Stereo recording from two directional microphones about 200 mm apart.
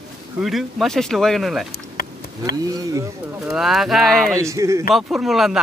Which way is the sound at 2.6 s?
20° right (ahead or behind).